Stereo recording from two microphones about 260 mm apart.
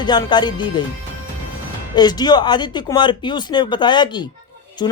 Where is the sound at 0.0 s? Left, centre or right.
Centre.